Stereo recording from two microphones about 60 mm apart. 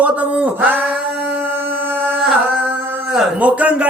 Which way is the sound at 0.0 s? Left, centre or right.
Right.